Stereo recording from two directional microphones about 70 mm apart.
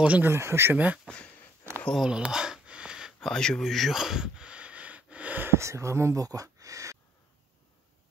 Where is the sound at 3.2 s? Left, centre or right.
Centre; by 5.5 s right.